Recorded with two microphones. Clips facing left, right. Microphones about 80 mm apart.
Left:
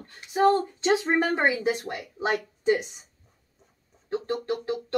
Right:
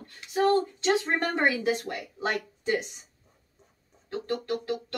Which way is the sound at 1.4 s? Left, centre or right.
Left.